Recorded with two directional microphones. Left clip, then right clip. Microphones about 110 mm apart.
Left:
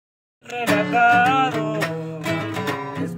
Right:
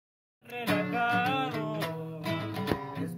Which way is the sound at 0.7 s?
40° left (ahead or behind).